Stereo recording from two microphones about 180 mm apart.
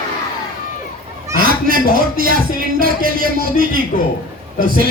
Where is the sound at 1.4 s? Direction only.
55° right (ahead or behind).